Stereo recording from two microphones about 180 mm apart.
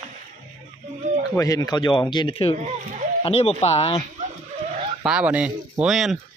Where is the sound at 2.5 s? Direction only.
40° right (ahead or behind).